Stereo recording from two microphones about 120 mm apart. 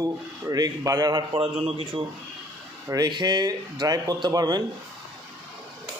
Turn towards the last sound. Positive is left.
turn(degrees=-35)  # may be behind; listen again after turning